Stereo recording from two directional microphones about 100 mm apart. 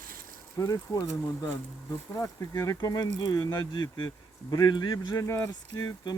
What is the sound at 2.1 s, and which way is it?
Speech, 30° left (ahead or behind).